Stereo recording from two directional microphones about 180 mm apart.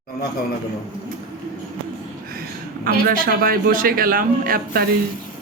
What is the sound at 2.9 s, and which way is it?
A man's voice, 55° right (ahead or behind).